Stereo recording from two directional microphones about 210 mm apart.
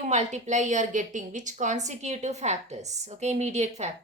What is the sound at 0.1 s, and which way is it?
A woman's voice, 35° right (ahead or behind).